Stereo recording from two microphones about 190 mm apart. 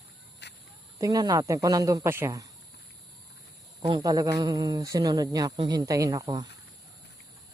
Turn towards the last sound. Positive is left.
turn(degrees=-20)  # may be behind; listen again after turning